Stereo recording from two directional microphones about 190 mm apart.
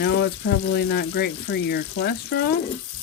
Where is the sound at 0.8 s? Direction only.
60° left (ahead or behind).